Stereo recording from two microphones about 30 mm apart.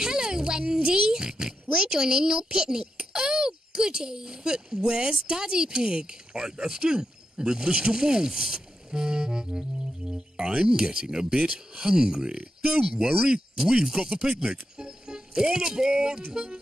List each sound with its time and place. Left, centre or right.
0.0 s speech: right
8.5 s music: right
10.0 s speech: right
14.8 s speech: right